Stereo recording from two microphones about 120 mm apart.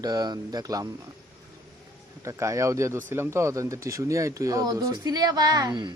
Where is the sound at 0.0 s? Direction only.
35° right (ahead or behind).